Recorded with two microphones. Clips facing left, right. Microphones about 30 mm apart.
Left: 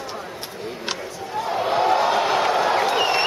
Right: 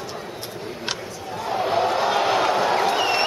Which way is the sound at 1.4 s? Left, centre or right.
Centre.